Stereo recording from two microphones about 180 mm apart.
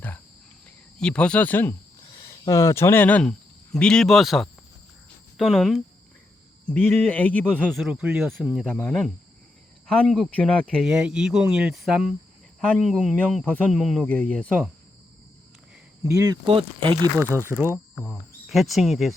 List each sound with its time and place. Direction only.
0.9 s speech: 5° left (ahead or behind)
2.0 s speech: 20° left (ahead or behind); by 5.8 s centre (ahead or behind)
6.7 s speech: 10° left (ahead or behind)
16.0 s speech: 20° right (ahead or behind)
16.5 s speech: 30° right (ahead or behind)
17.2 s speech: 15° right (ahead or behind)
18.4 s speech: centre (ahead or behind)